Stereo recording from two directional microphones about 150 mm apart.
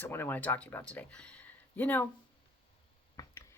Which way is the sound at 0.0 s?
15° left (ahead or behind).